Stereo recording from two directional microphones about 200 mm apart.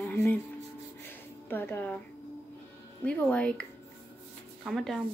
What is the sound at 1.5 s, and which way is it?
Speech, 10° left (ahead or behind).